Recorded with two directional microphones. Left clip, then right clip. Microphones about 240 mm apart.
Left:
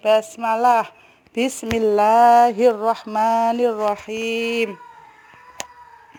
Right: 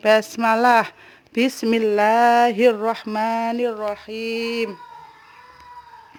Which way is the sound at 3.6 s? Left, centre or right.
Centre.